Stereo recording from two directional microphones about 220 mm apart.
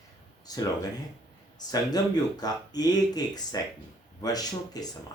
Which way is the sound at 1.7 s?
15° left (ahead or behind).